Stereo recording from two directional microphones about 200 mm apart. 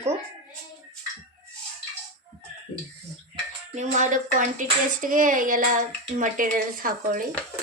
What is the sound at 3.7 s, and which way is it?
Speech, 35° right (ahead or behind).